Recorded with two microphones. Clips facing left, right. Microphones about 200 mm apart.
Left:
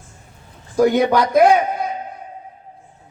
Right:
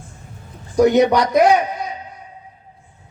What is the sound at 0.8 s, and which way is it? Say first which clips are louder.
A man's voice: right 1 dB; 50° left (ahead or behind).